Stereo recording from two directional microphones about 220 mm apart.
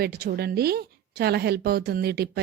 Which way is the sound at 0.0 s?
45° right (ahead or behind).